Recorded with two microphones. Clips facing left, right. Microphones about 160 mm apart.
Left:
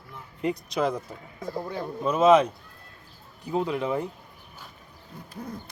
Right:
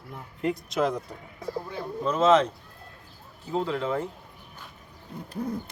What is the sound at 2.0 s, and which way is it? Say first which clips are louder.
Speech: left 2 dB; 10° left (ahead or behind).